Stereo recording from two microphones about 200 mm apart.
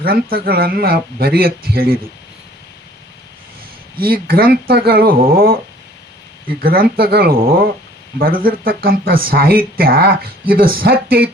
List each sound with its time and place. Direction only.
0.0 s speech: 50° right (ahead or behind)
4.0 s speech: 50° right (ahead or behind)
6.6 s speech: 45° right (ahead or behind)